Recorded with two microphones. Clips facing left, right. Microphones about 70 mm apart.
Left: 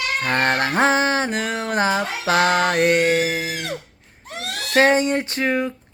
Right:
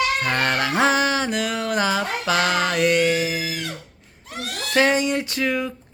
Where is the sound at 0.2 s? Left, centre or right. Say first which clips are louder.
Left 2 dB; left.